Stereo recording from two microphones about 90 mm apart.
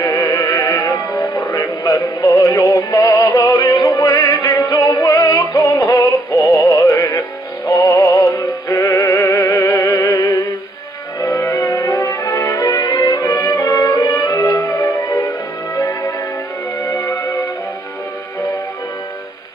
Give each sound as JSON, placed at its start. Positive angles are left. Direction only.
{"t": 0.0, "sound": "music", "side_deg": 40}